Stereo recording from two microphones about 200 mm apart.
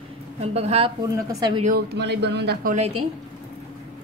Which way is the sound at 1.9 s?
55° right (ahead or behind).